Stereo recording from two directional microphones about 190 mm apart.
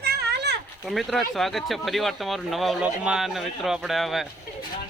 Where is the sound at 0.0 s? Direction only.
60° right (ahead or behind).